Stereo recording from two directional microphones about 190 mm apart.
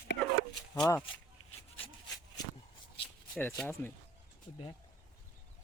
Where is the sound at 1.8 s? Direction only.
20° left (ahead or behind).